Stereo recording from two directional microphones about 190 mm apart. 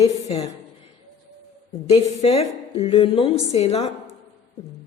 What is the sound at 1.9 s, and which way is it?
A woman's voice, 35° left (ahead or behind).